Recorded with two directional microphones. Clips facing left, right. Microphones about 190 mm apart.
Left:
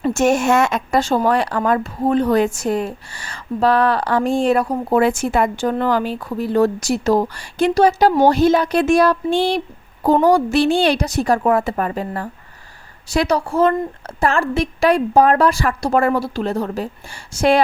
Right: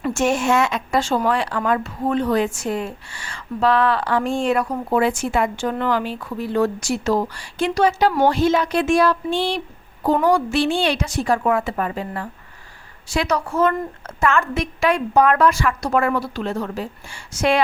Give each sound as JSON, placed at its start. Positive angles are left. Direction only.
{"t": 0.1, "sound": "speech", "side_deg": 40}